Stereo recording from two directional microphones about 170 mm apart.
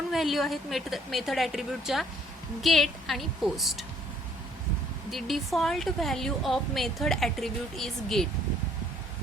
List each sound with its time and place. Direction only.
0.1 s a woman's voice: centre (ahead or behind)
5.1 s a woman's voice: centre (ahead or behind)